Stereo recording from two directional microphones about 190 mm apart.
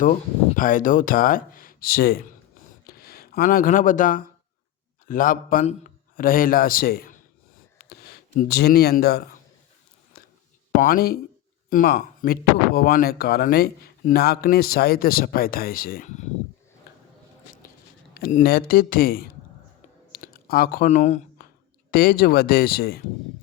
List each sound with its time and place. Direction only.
0.0 s speech: 45° left (ahead or behind)
7.8 s a sound: 55° left (ahead or behind)
8.4 s speech: 55° left (ahead or behind)
10.1 s a sound: 55° left (ahead or behind)
10.8 s speech: 50° left (ahead or behind)
18.1 s speech: 45° left (ahead or behind)
20.1 s clicking: 50° left (ahead or behind)
21.8 s speech: 50° left (ahead or behind)